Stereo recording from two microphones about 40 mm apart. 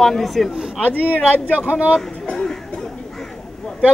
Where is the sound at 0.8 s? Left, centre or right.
Left.